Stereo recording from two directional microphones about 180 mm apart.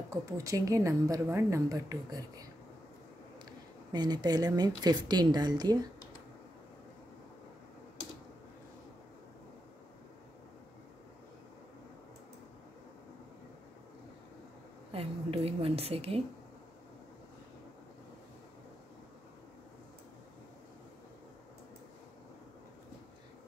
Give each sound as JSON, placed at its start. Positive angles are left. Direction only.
{"t": 0.1, "sound": "a woman's voice", "side_deg": -15}
{"t": 3.9, "sound": "a woman's voice", "side_deg": -25}
{"t": 14.9, "sound": "a sound", "side_deg": -30}